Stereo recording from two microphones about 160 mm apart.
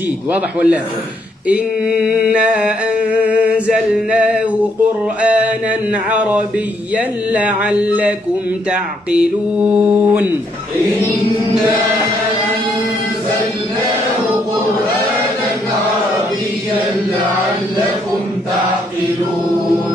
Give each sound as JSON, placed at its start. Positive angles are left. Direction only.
{"t": 0.3, "sound": "chant", "side_deg": -10}
{"t": 2.0, "sound": "chant", "side_deg": -5}
{"t": 5.2, "sound": "mantra", "side_deg": -10}
{"t": 6.1, "sound": "chant", "side_deg": -10}
{"t": 9.1, "sound": "chant", "side_deg": -10}